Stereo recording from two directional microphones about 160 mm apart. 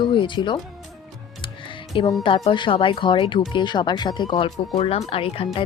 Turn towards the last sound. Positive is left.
turn(degrees=35)  # may be behind; listen again after turning